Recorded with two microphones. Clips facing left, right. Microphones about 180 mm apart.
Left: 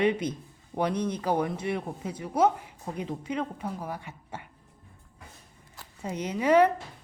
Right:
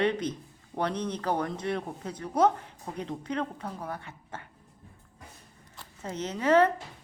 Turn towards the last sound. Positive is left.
turn(degrees=10)  # may be behind; listen again after turning